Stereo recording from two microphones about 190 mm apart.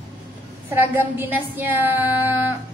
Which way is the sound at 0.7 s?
10° right (ahead or behind).